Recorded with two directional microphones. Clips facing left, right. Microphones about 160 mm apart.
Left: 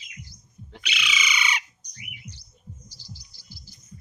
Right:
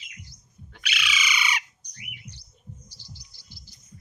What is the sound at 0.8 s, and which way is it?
Squawk, 5° right (ahead or behind).